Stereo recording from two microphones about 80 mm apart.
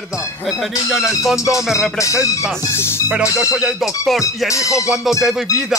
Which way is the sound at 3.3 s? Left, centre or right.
Centre.